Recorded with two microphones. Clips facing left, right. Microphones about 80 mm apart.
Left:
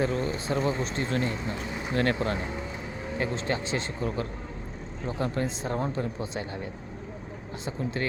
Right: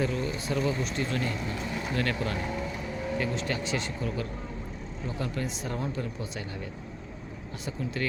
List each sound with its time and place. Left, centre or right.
0.0 s speech: left